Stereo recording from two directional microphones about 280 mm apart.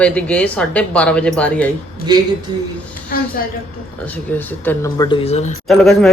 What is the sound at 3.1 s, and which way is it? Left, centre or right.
Speech, left.